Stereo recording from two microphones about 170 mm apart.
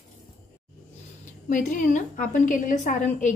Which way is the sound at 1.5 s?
50° left (ahead or behind).